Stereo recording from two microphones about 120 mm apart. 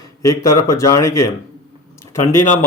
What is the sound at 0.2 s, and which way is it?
Speech, 25° left (ahead or behind).